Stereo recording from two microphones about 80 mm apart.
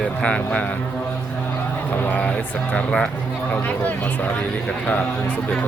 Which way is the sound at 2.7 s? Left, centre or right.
Centre.